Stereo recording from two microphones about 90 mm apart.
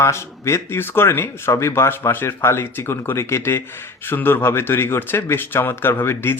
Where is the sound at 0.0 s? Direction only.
30° left (ahead or behind).